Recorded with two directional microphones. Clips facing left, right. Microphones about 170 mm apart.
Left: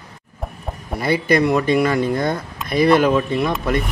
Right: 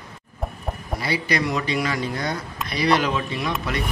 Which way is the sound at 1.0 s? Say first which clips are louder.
Left 8 dB; 50° left (ahead or behind).